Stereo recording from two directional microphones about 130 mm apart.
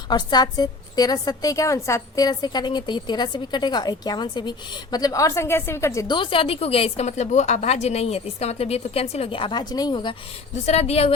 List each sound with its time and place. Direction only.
0.1 s a woman's voice: 35° left (ahead or behind)
6.1 s a woman's voice: 40° left (ahead or behind)
10.5 s a woman's voice: 55° left (ahead or behind)